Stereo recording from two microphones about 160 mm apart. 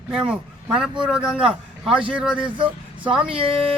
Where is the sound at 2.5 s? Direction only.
30° right (ahead or behind).